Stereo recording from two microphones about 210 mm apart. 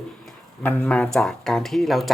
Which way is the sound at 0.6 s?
10° left (ahead or behind).